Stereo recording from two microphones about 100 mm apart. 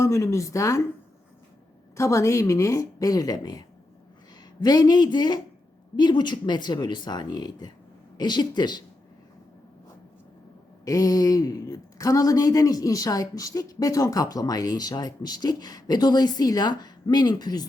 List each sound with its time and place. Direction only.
0.0 s speech: 35° left (ahead or behind)
2.0 s speech: 30° left (ahead or behind)
4.6 s speech: 40° left (ahead or behind)
10.8 s speech: 35° left (ahead or behind)